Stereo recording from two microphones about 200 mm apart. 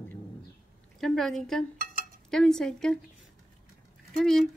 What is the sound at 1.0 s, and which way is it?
Speech, centre (ahead or behind).